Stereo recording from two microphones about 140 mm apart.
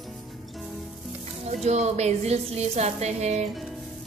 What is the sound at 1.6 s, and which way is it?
A woman's voice, 50° right (ahead or behind).